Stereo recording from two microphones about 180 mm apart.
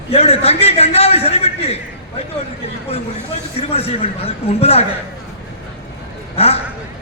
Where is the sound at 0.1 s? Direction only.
35° left (ahead or behind).